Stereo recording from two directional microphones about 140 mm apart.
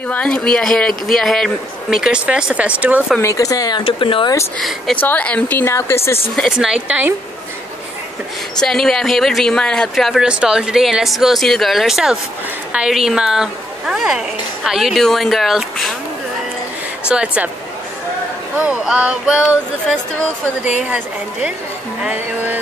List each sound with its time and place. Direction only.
0.1 s speech: 5° left (ahead or behind); by 3.2 s 10° right (ahead or behind)
3.2 s speech: 20° left (ahead or behind)
4.6 s a woman's voice: centre (ahead or behind); by 6.1 s 20° left (ahead or behind)
6.3 s speech: centre (ahead or behind)
8.5 s speech: 5° left (ahead or behind)
17.1 s a woman's voice: 10° right (ahead or behind)
18.6 s speech: 5° right (ahead or behind)
20.8 s a woman's voice: 5° right (ahead or behind)